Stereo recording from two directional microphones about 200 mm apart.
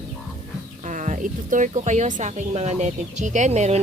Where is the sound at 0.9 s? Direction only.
40° right (ahead or behind).